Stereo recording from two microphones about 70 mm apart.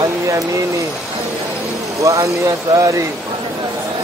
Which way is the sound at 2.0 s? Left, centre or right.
Right.